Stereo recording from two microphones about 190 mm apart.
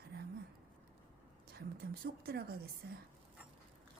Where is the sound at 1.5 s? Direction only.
55° right (ahead or behind).